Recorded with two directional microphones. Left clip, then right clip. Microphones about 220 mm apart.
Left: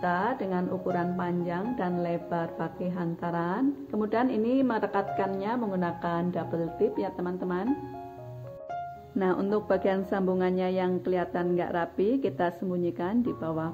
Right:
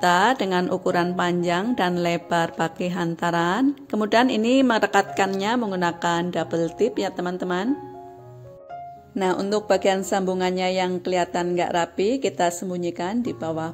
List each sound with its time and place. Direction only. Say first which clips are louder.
0.0 s a woman's voice: right 10 dB; 45° right (ahead or behind)
9.2 s speech: right 5 dB; 20° right (ahead or behind)